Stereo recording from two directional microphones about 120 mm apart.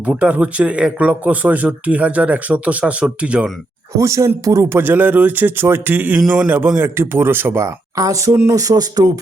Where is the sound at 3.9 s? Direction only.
25° right (ahead or behind).